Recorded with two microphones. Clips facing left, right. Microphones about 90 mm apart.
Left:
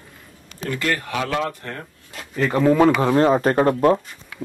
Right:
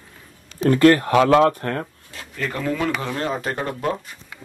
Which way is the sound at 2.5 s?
25° left (ahead or behind).